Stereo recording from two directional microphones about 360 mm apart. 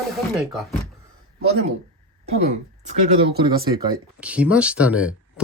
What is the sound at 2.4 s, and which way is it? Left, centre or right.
Speech, centre.